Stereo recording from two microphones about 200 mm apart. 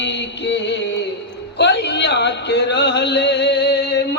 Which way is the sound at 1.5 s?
60° left (ahead or behind).